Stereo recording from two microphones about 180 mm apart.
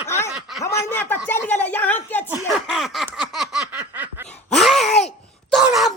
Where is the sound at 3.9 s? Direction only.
10° right (ahead or behind).